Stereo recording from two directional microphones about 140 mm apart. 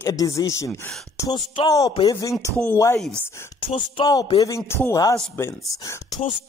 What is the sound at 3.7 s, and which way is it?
Music, 35° left (ahead or behind).